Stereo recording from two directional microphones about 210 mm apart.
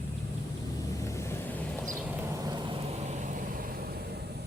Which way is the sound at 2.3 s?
20° right (ahead or behind).